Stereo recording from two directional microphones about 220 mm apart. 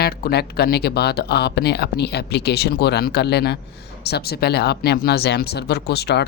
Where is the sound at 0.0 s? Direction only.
45° left (ahead or behind).